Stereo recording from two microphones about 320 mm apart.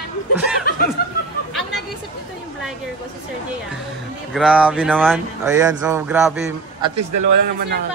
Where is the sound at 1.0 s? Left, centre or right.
Left.